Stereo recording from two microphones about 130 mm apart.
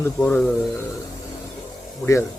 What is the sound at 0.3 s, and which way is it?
Speech, 10° left (ahead or behind).